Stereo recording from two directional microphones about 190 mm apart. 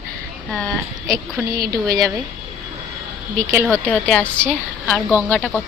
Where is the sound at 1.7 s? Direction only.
20° right (ahead or behind).